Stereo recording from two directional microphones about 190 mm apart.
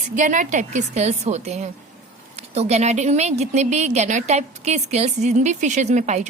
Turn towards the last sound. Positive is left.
turn(degrees=-40)  # may be behind; listen again after turning